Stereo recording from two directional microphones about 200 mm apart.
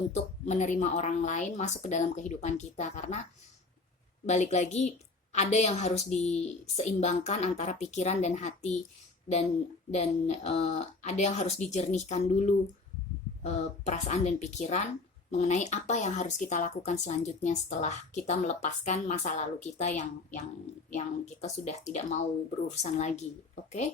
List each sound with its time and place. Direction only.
0.1 s speech: 35° left (ahead or behind)
4.3 s speech: 35° left (ahead or behind)
9.9 s speech: 35° left (ahead or behind)
21.4 s speech: 35° left (ahead or behind)